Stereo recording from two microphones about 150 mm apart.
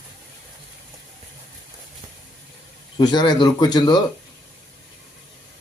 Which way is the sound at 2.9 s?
30° left (ahead or behind).